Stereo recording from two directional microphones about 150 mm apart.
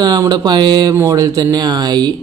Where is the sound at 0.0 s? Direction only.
25° right (ahead or behind).